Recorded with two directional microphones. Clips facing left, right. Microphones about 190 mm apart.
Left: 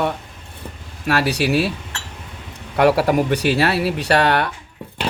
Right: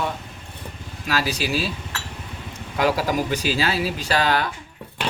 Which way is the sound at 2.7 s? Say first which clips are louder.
Left 6 dB; 65° left (ahead or behind).